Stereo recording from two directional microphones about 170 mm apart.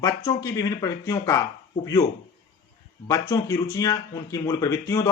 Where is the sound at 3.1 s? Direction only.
20° left (ahead or behind).